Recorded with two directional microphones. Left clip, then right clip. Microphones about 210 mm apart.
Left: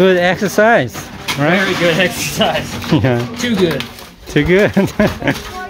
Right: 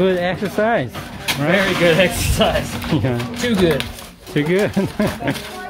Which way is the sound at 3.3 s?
10° right (ahead or behind).